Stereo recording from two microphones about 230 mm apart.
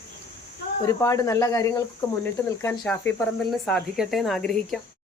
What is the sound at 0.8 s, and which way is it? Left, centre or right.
Speech, centre.